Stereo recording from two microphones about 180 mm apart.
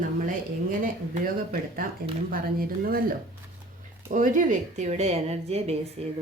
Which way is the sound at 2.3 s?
55° right (ahead or behind).